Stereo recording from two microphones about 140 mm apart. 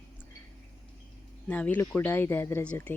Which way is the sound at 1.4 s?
10° left (ahead or behind).